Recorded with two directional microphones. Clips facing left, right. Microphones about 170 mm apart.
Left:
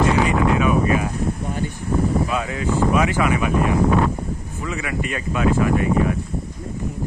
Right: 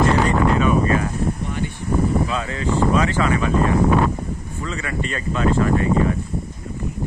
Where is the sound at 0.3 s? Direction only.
10° left (ahead or behind).